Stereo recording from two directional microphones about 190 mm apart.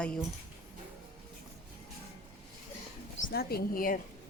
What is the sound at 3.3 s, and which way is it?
Speech, 55° left (ahead or behind).